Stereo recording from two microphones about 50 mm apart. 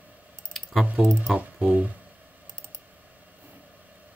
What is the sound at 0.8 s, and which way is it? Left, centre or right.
Speech, right.